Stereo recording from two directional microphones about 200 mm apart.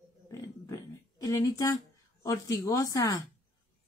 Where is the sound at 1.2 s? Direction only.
15° left (ahead or behind).